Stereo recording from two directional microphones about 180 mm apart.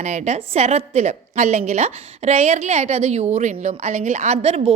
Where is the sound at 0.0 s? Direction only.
40° right (ahead or behind).